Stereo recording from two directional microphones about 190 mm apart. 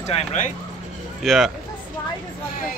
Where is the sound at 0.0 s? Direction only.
35° left (ahead or behind).